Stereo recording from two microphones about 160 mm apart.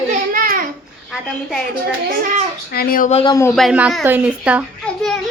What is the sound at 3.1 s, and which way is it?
Speech, 40° left (ahead or behind).